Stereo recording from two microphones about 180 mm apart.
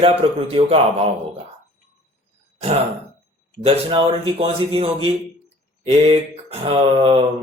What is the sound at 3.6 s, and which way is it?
Speech, 35° right (ahead or behind).